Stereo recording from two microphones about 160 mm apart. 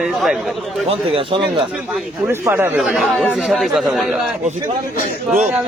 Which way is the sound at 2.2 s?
10° right (ahead or behind).